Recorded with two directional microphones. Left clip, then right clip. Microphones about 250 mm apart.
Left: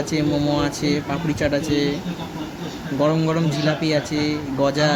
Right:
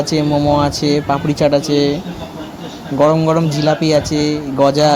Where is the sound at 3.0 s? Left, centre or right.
Centre.